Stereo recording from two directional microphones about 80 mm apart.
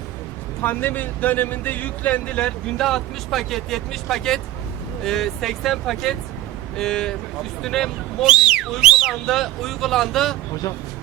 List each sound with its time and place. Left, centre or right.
0.6 s speech: left
2.7 s speech: centre
8.3 s speech: centre
9.2 s speech: centre